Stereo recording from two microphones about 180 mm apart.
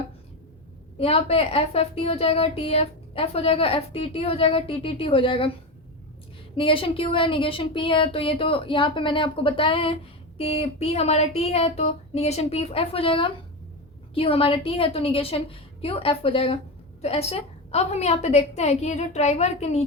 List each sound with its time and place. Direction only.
0.9 s a woman's voice: 35° left (ahead or behind)
6.6 s a woman's voice: 30° left (ahead or behind)